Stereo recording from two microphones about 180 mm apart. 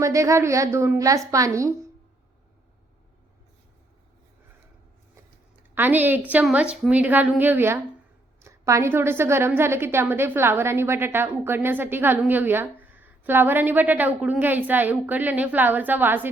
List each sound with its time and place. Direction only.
0.0 s a woman's voice: 15° right (ahead or behind)
5.7 s a woman's voice: 10° right (ahead or behind)